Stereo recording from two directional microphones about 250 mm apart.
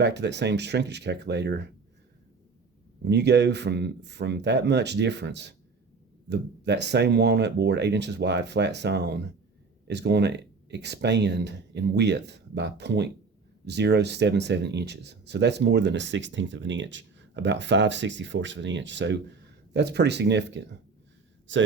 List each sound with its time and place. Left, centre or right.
0.0 s speech: right
3.0 s speech: right